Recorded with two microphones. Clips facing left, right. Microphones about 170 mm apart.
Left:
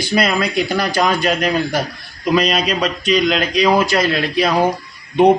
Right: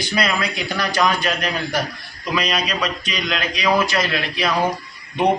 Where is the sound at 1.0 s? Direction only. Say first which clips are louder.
Left 3 dB; 35° left (ahead or behind).